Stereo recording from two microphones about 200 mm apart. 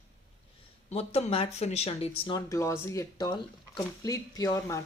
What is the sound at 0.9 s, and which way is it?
Speech, 30° left (ahead or behind).